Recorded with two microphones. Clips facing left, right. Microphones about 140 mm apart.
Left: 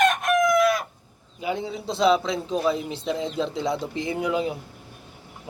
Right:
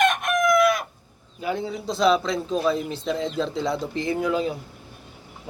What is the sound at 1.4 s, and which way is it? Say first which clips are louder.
A man's voice: right 1 dB; 15° left (ahead or behind).